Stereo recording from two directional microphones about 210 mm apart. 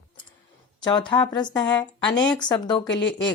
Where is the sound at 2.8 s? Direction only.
60° left (ahead or behind).